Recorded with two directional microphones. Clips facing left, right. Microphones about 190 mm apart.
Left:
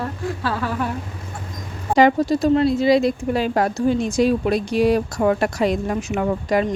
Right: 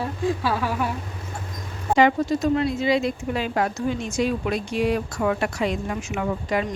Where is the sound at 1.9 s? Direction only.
35° left (ahead or behind).